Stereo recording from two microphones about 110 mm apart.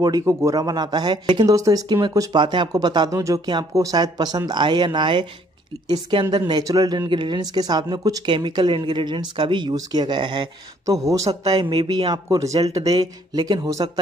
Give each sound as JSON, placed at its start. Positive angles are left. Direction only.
{"t": 0.2, "sound": "speech", "side_deg": -30}
{"t": 10.9, "sound": "speech", "side_deg": -30}